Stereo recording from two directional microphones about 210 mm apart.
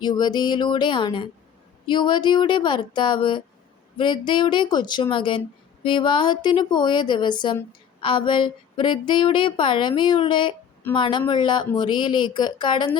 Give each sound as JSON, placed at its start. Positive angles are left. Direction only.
{"t": 0.0, "sound": "speech", "side_deg": 20}